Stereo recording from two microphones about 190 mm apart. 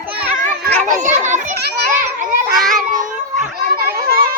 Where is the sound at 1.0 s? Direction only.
40° right (ahead or behind).